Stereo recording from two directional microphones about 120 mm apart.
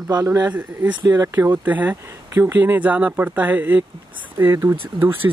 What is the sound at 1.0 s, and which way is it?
Speech, 30° right (ahead or behind).